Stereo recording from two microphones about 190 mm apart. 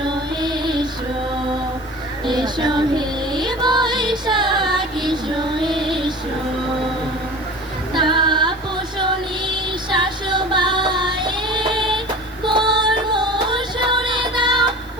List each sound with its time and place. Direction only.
0.0 s music: 25° right (ahead or behind)
2.2 s music: 25° right (ahead or behind)
5.0 s child singing: 25° right (ahead or behind)
5.6 s music: 25° right (ahead or behind)
7.9 s female singing: 25° right (ahead or behind)
9.9 s music: 25° right (ahead or behind)